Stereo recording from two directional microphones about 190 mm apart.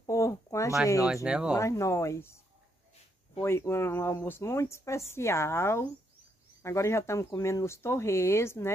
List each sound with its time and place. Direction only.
0.0 s a sound: 15° left (ahead or behind)
1.0 s speech: 5° right (ahead or behind)
1.5 s speech: 15° left (ahead or behind)
3.3 s speech: 15° left (ahead or behind)